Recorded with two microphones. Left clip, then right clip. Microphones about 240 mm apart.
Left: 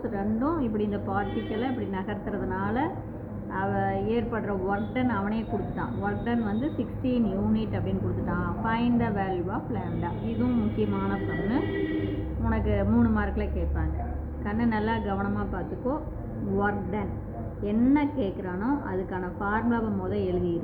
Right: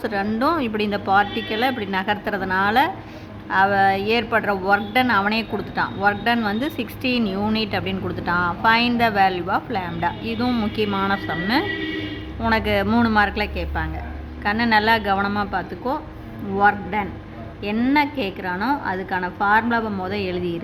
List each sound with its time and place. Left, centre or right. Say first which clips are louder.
0.0 s a woman's voice: right 8 dB; right